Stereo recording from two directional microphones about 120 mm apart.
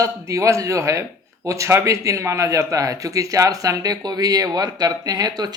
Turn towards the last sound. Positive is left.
turn(degrees=-35)  # may be behind; listen again after turning